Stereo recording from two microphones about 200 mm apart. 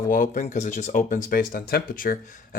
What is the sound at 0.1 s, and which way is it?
Speech, 40° left (ahead or behind).